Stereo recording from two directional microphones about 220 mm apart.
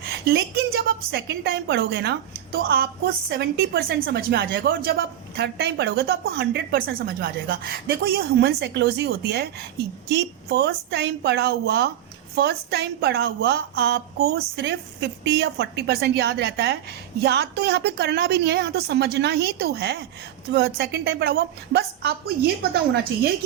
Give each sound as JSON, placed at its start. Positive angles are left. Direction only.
{"t": 0.1, "sound": "a woman's voice", "side_deg": -45}